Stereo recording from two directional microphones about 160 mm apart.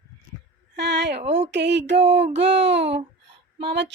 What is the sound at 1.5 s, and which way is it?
Speech, 90° right.